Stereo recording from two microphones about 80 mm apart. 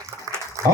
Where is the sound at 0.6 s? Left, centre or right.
Right.